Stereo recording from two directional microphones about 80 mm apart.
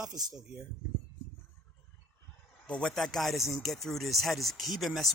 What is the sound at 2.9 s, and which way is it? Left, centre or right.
Speech, centre.